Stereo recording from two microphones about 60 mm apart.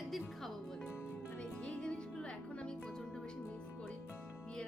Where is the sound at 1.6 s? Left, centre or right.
Centre.